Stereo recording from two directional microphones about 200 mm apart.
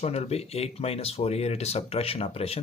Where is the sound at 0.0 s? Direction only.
30° left (ahead or behind).